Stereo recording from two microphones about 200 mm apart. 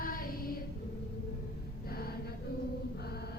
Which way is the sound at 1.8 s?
50° left (ahead or behind).